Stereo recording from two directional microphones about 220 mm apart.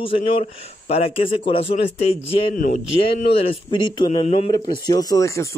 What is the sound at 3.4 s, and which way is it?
A man's voice, 20° left (ahead or behind).